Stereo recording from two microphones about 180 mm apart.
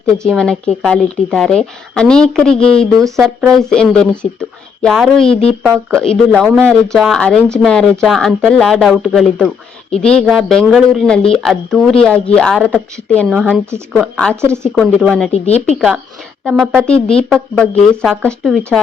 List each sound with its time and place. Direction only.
0.3 s speech: 5° left (ahead or behind)
14.4 s speech: 15° right (ahead or behind)
14.8 s speech: 5° left (ahead or behind)
15.4 s speech: 35° left (ahead or behind)
15.7 s a woman's voice: centre (ahead or behind)